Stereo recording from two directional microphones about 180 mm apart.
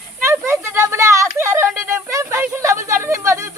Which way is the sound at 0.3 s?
15° right (ahead or behind).